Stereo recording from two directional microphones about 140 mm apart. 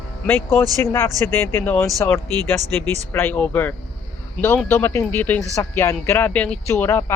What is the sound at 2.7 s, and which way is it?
Speech, 10° left (ahead or behind).